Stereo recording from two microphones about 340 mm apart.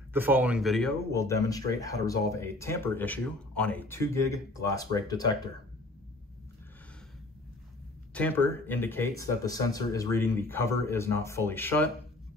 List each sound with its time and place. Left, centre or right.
0.1 s speech: centre
8.1 s speech: centre